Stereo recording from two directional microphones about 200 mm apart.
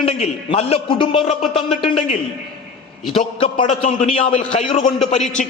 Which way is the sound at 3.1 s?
25° left (ahead or behind).